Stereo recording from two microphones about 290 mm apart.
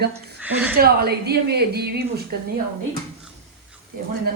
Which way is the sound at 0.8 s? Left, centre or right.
Right.